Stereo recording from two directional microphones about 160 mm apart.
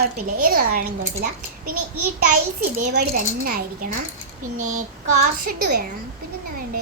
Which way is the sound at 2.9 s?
70° right (ahead or behind).